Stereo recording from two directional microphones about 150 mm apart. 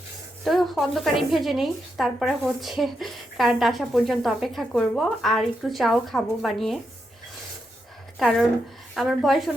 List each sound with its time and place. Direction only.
0.4 s speech: centre (ahead or behind)
8.2 s speech: centre (ahead or behind)